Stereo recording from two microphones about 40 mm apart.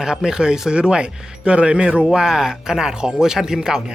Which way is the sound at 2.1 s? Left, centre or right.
Centre.